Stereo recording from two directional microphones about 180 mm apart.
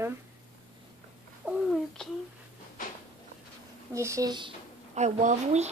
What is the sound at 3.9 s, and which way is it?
Speech, 15° right (ahead or behind).